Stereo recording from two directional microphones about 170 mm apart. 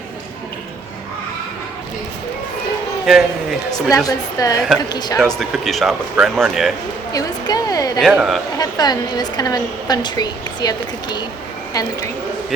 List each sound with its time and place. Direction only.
3.1 s speech: centre (ahead or behind)
3.9 s a woman's voice: 20° left (ahead or behind)
5.4 s speech: centre (ahead or behind)
7.1 s a woman's voice: 20° left (ahead or behind)
7.9 s speech: centre (ahead or behind)
8.5 s a woman's voice: 25° left (ahead or behind)